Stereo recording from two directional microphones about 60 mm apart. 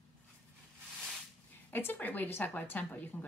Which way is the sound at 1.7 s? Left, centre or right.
Left.